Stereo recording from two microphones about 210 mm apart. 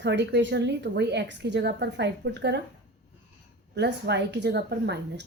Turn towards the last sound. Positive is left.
turn(degrees=-55)  # may be behind; listen again after turning